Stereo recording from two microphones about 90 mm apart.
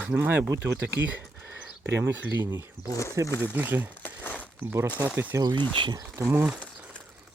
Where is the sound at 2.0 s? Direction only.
20° right (ahead or behind).